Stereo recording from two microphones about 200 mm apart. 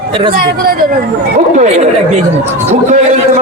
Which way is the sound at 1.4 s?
35° right (ahead or behind).